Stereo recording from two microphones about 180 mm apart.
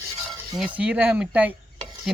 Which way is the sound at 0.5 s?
5° right (ahead or behind).